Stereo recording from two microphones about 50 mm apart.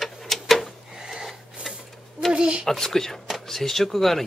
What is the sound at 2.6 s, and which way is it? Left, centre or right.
Speech, centre.